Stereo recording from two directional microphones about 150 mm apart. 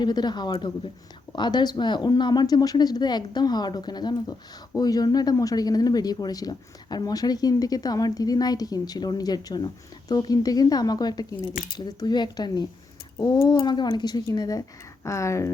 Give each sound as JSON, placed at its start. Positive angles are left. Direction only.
{"t": 0.0, "sound": "speech", "side_deg": 30}